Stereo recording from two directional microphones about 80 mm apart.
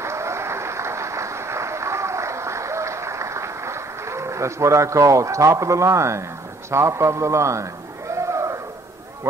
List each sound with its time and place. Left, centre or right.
0.0 s applause: right
6.7 s a man's voice: right
8.1 s a sound: right